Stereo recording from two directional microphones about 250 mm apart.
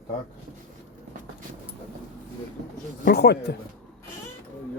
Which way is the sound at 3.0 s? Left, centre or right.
Left.